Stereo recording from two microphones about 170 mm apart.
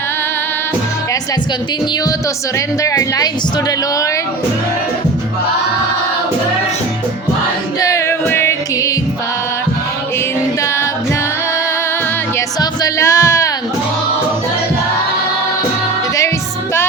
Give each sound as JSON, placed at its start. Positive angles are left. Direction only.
{"t": 2.8, "sound": "a woman's voice", "side_deg": 20}
{"t": 7.8, "sound": "music", "side_deg": 20}
{"t": 12.5, "sound": "music", "side_deg": 20}